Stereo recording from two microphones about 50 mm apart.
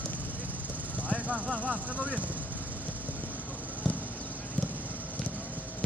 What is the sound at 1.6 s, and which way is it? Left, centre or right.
Speech, right.